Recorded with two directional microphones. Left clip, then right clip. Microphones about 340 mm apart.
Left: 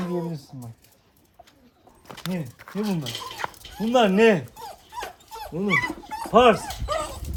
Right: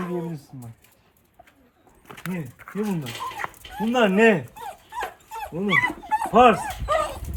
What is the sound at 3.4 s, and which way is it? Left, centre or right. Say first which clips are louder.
Dog: left 1 dB; centre.